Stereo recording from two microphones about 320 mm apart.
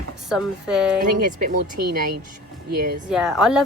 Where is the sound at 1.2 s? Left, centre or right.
Right.